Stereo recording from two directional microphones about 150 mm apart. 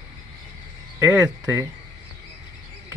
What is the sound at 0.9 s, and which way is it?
Speech, 15° right (ahead or behind).